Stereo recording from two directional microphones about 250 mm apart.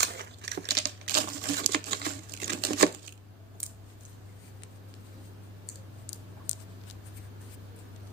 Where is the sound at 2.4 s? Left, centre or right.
Right.